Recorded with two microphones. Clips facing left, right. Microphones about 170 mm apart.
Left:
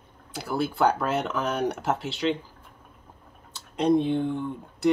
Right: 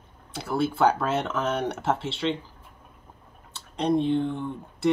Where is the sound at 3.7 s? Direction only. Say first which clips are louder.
Left 1 dB; 10° left (ahead or behind).